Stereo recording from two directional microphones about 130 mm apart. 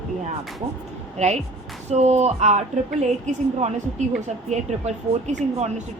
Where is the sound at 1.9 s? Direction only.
60° right (ahead or behind).